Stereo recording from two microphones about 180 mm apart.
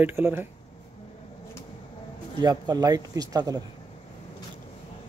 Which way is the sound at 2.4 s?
20° right (ahead or behind).